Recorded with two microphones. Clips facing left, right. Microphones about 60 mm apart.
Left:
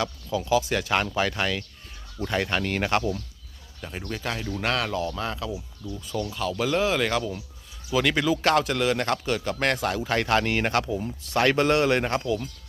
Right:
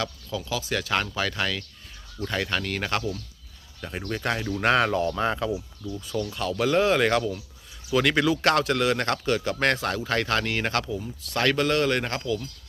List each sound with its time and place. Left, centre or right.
0.0 s speech: centre
3.8 s a man's voice: centre
6.1 s speech: centre
6.3 s a man's voice: centre